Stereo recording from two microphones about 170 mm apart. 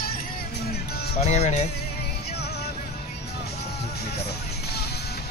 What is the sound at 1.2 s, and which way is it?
Speech, 40° left (ahead or behind).